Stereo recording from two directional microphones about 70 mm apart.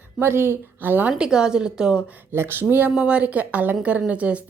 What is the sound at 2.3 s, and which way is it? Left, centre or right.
A woman's voice, right.